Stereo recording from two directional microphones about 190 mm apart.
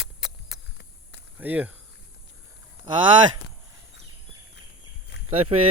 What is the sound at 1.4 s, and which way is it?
Speech, 10° right (ahead or behind).